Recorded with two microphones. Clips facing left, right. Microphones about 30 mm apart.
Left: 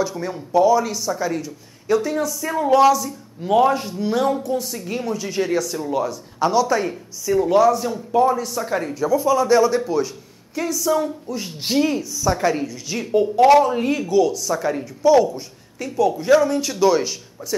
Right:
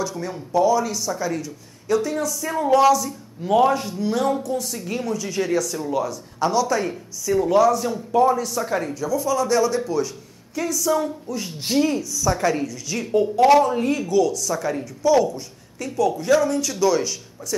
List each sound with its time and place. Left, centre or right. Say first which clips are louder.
0.0 s speech: left 3 dB; centre
8.9 s speech: left 8 dB; centre